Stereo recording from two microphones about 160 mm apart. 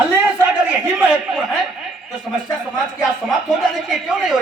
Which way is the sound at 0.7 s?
5° right (ahead or behind).